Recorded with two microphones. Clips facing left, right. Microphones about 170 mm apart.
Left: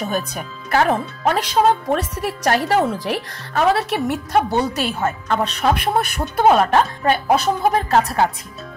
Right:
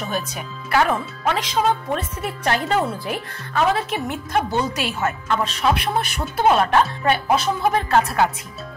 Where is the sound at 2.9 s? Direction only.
90° left.